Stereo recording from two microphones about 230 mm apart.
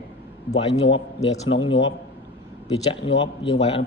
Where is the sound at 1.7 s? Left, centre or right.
Left.